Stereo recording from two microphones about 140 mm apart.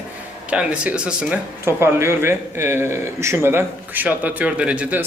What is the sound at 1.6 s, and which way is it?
A man's voice, 15° right (ahead or behind).